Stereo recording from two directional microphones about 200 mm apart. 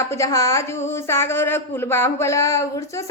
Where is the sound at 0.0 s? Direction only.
15° left (ahead or behind).